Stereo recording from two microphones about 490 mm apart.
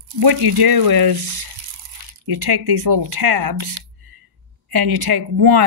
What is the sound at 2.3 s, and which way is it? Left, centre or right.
Speech, right.